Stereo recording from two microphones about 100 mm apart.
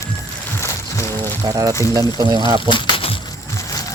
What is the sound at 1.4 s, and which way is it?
Speech, 35° right (ahead or behind).